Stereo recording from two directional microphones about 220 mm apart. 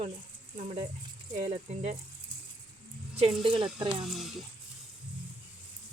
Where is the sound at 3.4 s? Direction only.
25° right (ahead or behind).